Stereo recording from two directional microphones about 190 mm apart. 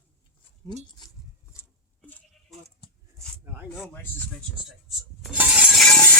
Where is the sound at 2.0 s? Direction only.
5° left (ahead or behind).